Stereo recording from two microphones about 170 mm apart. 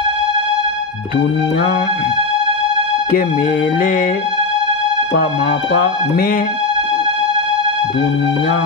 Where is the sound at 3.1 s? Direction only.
60° left (ahead or behind).